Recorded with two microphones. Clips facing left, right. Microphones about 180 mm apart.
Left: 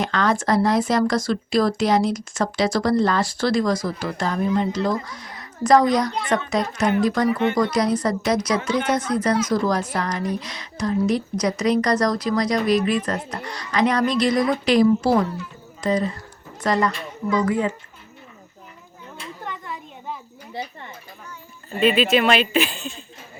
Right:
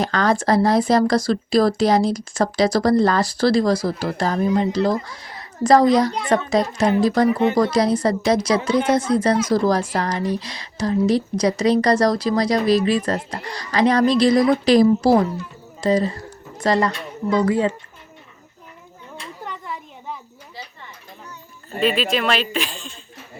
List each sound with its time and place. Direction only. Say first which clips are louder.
0.0 s speech: right 2 dB; 35° right (ahead or behind)
21.8 s speech: left 2 dB; centre (ahead or behind)